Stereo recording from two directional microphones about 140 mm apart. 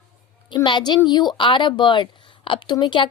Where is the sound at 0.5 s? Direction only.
30° left (ahead or behind).